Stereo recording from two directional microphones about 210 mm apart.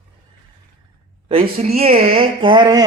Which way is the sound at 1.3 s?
25° right (ahead or behind).